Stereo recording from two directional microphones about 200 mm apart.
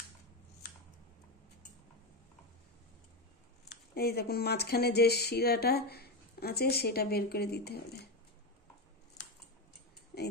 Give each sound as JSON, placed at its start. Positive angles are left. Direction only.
{"t": 3.9, "sound": "speech", "side_deg": 50}